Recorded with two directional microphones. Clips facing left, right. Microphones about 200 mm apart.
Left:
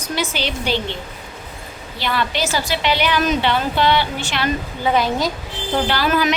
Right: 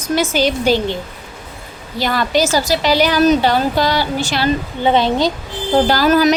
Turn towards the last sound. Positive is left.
turn(degrees=-40)  # may be behind; listen again after turning